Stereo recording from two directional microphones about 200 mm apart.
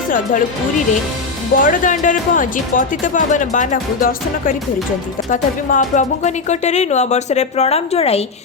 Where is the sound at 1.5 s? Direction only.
45° left (ahead or behind).